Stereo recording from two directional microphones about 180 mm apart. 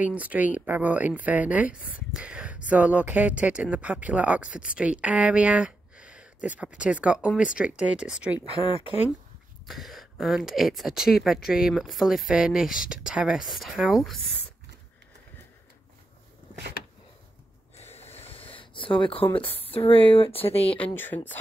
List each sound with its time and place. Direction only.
0.0 s speech: 10° right (ahead or behind)
1.8 s speech: 50° left (ahead or behind)
2.1 s speech: 5° right (ahead or behind)
9.7 s speech: centre (ahead or behind)
17.7 s a sound: 35° left (ahead or behind)
19.3 s speech: 30° left (ahead or behind)
20.7 s speech: 10° left (ahead or behind)